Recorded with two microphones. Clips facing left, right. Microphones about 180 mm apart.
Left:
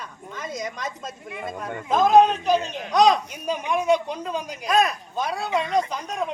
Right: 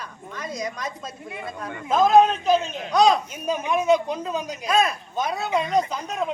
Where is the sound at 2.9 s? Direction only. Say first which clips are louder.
Even; centre (ahead or behind).